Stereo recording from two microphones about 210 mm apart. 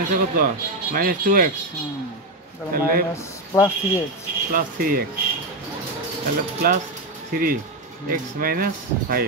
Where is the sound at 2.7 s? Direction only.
40° right (ahead or behind).